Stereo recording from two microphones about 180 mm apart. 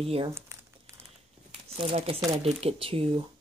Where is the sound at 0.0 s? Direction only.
35° right (ahead or behind).